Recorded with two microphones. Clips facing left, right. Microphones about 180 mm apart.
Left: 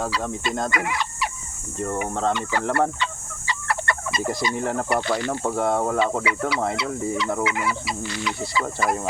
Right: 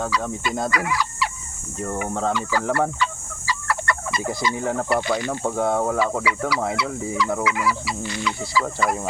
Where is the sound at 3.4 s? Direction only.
25° left (ahead or behind).